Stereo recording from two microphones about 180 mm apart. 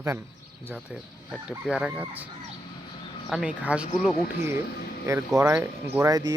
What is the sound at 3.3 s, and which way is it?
Speech, 5° right (ahead or behind).